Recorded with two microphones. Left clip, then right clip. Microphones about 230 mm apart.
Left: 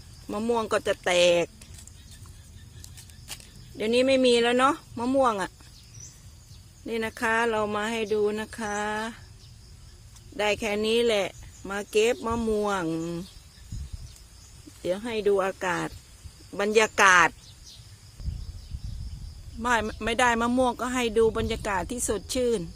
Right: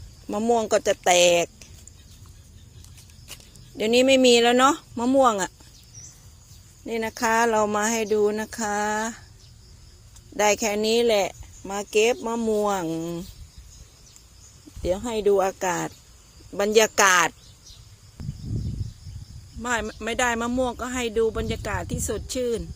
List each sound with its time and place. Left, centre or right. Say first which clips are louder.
0.3 s speech: right 5 dB; centre
3.8 s speech: right 4 dB; right
6.8 s speech: right 3 dB; centre
10.3 s speech: right 5 dB; centre
14.8 s speech: right 3 dB; centre
19.6 s speech: left 1 dB; centre